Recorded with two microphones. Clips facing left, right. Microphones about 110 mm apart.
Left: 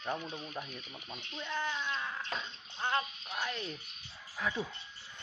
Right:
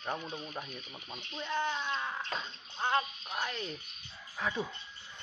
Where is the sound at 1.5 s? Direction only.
20° right (ahead or behind).